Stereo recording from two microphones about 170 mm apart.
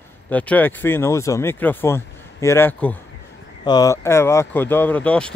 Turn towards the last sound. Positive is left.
turn(degrees=5)  # may be behind; listen again after turning